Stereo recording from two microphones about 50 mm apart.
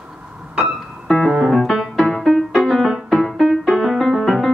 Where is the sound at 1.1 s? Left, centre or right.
Centre.